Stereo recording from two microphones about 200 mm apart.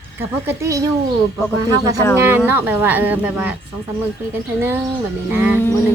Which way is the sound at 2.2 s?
10° right (ahead or behind).